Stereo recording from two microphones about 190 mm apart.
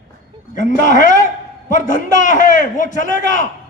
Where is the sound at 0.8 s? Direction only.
45° left (ahead or behind).